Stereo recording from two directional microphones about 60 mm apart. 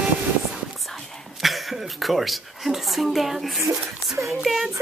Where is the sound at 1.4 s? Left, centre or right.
Centre.